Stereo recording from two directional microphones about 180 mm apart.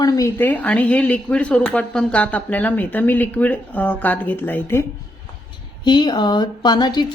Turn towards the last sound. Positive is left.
turn(degrees=25)  # may be behind; listen again after turning